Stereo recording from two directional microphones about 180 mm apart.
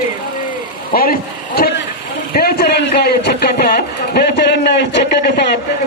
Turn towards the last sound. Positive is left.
turn(degrees=65)  # may be behind; listen again after turning